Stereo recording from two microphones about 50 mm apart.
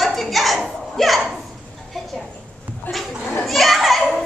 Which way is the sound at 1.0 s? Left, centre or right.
Centre.